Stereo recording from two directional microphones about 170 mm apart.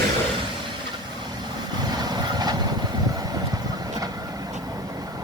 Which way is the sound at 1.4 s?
25° right (ahead or behind).